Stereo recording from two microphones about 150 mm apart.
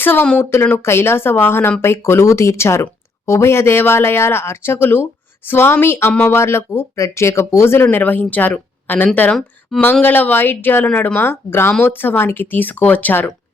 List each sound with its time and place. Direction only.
0.0 s speech: 15° left (ahead or behind)